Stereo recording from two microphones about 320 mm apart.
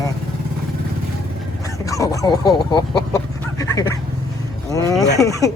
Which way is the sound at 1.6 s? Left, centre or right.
Centre.